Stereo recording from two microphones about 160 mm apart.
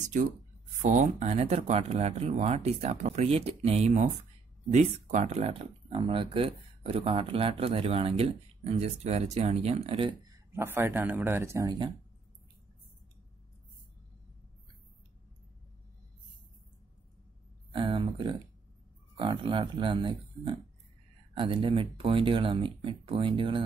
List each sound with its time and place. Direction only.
0.8 s speech: 45° right (ahead or behind)
10.5 s speech: 15° right (ahead or behind)
17.7 s speech: 30° right (ahead or behind)